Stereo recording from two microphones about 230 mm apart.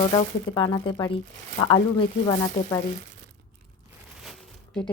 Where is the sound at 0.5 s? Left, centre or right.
Left.